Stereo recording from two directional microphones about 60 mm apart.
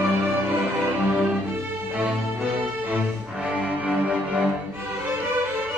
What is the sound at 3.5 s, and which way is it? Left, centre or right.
Music, right.